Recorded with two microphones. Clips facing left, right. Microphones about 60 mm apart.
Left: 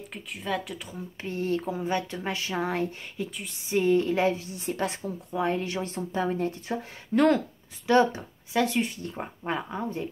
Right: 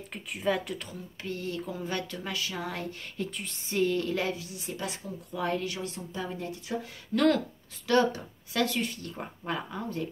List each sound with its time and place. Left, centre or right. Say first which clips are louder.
0.1 s speech: right 2 dB; centre
0.9 s speech: left 4 dB; left
1.8 s speech: left 5 dB; left
3.2 s speech: left 2 dB; centre
3.7 s a woman's voice: left 5 dB; left
5.3 s a woman's voice: left 3 dB; left
7.2 s speech: left 2 dB; left